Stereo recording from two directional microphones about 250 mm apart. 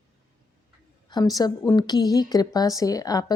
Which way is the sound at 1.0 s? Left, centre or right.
Centre.